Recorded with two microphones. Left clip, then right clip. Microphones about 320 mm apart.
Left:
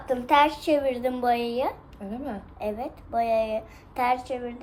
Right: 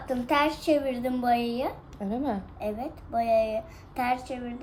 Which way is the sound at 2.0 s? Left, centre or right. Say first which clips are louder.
Right 5 dB; right.